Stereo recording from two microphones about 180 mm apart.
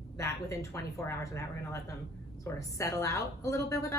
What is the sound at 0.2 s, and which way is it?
Speech, 15° left (ahead or behind).